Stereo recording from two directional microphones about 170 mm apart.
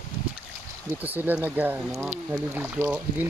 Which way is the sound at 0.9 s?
10° right (ahead or behind).